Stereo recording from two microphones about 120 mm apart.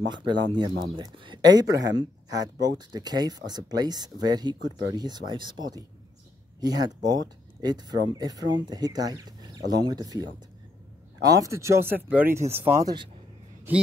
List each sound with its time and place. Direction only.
0.1 s speech: 40° right (ahead or behind); by 12.4 s 15° right (ahead or behind)
12.4 s speech: 60° right (ahead or behind)
12.6 s speech: 25° right (ahead or behind)